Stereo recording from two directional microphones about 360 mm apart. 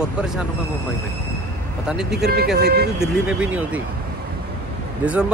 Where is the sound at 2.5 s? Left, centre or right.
Right.